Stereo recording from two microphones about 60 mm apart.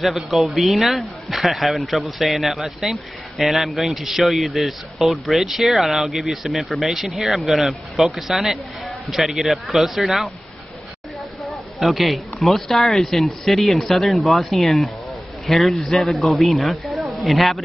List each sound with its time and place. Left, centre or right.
0.0 s a man's voice: centre
11.8 s a man's voice: centre